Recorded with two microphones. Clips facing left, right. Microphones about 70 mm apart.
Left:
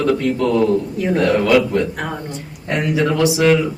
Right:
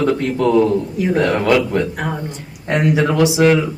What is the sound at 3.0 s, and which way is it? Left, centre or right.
Speech, centre.